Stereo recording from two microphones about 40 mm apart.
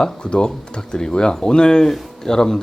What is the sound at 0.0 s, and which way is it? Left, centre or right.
Speech, left.